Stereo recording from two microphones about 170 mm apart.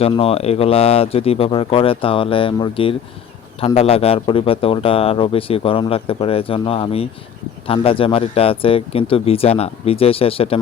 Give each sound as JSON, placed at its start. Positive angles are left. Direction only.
{"t": 0.0, "sound": "speech", "side_deg": 35}